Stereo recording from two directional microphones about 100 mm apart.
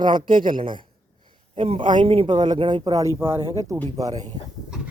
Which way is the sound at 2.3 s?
45° right (ahead or behind).